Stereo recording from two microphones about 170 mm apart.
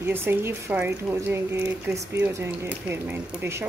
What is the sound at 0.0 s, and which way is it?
Speech, 15° right (ahead or behind).